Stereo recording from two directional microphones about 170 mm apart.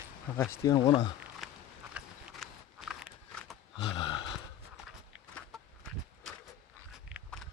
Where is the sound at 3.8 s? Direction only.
30° left (ahead or behind).